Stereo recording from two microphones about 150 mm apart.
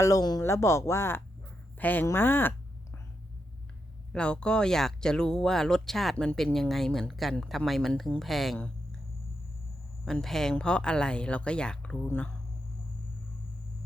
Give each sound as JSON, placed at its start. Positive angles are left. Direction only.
{"t": 0.0, "sound": "speech", "side_deg": 25}
{"t": 4.1, "sound": "speech", "side_deg": 5}
{"t": 10.1, "sound": "speech", "side_deg": 5}